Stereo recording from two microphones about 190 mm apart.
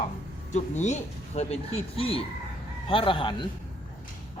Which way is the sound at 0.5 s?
40° left (ahead or behind).